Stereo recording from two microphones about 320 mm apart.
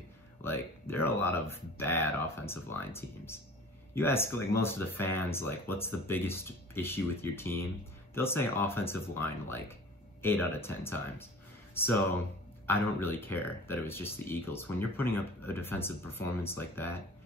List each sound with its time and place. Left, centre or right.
0.4 s speech: centre